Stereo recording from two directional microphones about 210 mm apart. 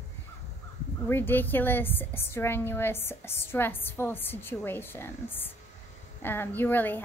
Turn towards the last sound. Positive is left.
turn(degrees=10)  # may be behind; listen again after turning